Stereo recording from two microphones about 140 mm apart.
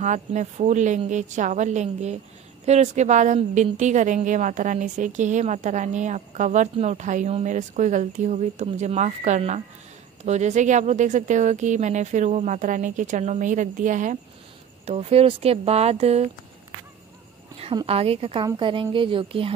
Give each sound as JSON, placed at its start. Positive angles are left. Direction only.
{"t": 0.0, "sound": "a woman's voice", "side_deg": -55}
{"t": 14.9, "sound": "speech", "side_deg": -50}
{"t": 17.8, "sound": "speech", "side_deg": -45}